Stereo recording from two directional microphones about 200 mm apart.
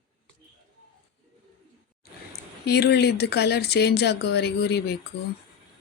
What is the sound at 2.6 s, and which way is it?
Speech, 55° left (ahead or behind).